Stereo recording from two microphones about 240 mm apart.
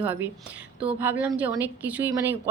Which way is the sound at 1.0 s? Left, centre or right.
Centre.